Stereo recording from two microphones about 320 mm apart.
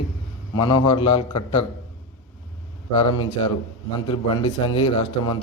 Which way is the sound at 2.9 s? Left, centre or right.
Centre.